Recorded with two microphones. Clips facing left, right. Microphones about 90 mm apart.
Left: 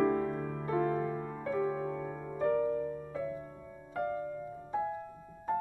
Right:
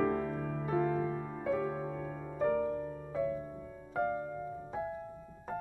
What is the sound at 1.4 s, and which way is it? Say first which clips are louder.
Music: left 1 dB; centre (ahead or behind).